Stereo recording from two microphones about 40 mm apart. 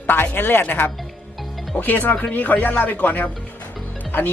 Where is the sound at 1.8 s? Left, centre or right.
Left.